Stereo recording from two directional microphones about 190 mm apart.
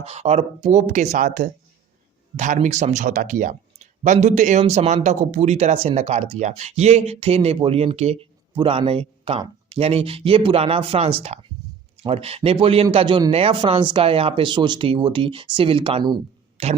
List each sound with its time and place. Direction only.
0.0 s speech: 35° right (ahead or behind)
11.6 s a sound: 20° right (ahead or behind)
12.0 s speech: 30° right (ahead or behind)